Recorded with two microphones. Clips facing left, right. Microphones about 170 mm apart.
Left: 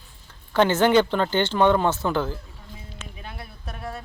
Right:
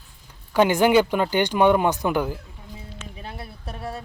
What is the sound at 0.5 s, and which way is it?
Speech, 10° right (ahead or behind).